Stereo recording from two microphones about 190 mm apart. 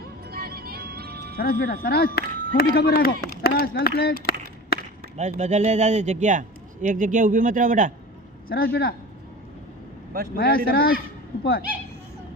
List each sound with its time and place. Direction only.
0.3 s music: 55° right (ahead or behind)
1.4 s a man's voice: 55° left (ahead or behind)
5.1 s a man's voice: 35° right (ahead or behind)
8.4 s a man's voice: 55° left (ahead or behind)
10.3 s a man's voice: 55° left (ahead or behind)